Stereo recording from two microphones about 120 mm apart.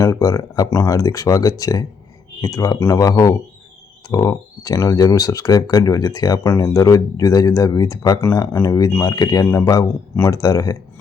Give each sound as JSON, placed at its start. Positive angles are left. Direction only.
{"t": 0.0, "sound": "speech", "side_deg": 30}